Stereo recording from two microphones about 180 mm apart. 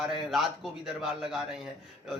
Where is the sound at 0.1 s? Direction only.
Centre (ahead or behind).